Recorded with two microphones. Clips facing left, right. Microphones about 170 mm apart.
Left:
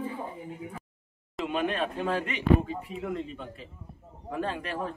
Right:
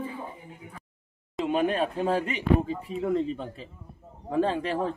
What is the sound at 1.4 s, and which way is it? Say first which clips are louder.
Speech: right 4 dB; 40° right (ahead or behind).